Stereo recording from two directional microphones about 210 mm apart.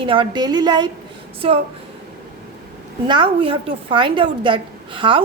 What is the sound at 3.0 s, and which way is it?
A woman's voice, 25° right (ahead or behind).